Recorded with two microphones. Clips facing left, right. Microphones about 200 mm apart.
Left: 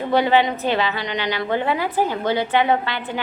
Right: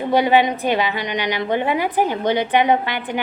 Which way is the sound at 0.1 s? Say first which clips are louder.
Right 2 dB; 15° right (ahead or behind).